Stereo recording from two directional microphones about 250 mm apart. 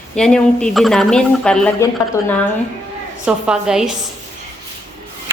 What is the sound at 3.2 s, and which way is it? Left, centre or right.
Speech, centre.